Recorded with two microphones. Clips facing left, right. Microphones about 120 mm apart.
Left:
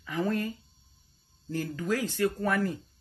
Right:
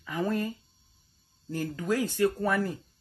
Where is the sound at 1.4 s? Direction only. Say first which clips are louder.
Even; 25° right (ahead or behind).